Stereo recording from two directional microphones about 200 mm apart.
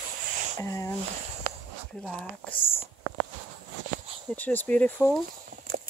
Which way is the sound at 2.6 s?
25° left (ahead or behind).